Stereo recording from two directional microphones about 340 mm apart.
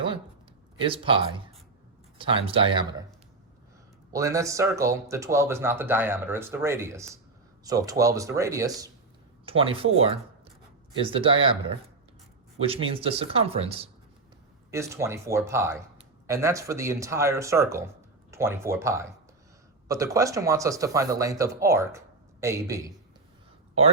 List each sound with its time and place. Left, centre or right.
0.8 s speech: centre
4.1 s speech: centre
12.5 s speech: centre